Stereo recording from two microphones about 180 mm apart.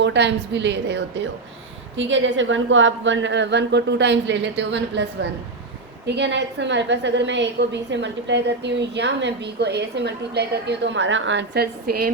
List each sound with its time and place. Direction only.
0.0 s a woman's voice: 80° right
2.0 s a woman's voice: 90° right; by 12.1 s 60° right (ahead or behind)